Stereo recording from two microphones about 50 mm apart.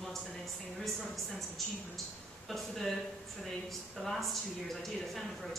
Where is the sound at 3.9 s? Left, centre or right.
Centre.